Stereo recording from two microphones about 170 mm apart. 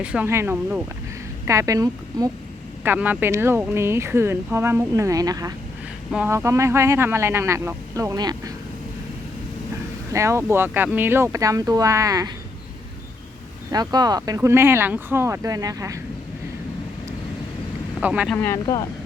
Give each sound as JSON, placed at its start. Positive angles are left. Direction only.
{"t": 0.0, "sound": "speech", "side_deg": -10}
{"t": 6.1, "sound": "speech", "side_deg": -5}
{"t": 6.3, "sound": "speech", "side_deg": -15}
{"t": 10.1, "sound": "speech", "side_deg": -15}
{"t": 13.7, "sound": "speech", "side_deg": -25}
{"t": 18.0, "sound": "speech", "side_deg": -5}
{"t": 18.3, "sound": "speech", "side_deg": 15}